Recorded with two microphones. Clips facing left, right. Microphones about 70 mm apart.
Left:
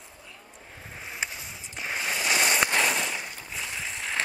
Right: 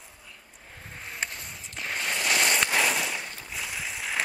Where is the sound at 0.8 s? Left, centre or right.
Centre.